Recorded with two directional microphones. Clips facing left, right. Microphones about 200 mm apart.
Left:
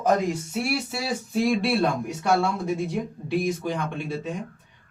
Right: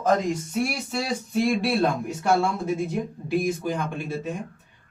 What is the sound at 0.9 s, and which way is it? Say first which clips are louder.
Speech: right 1 dB; centre (ahead or behind).